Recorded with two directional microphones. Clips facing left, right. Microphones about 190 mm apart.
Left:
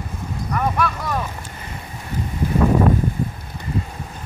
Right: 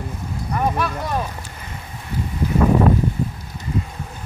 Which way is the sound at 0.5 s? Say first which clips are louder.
Even; 25° right (ahead or behind).